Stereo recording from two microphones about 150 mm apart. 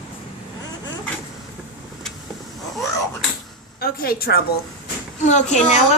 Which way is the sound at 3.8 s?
90° left.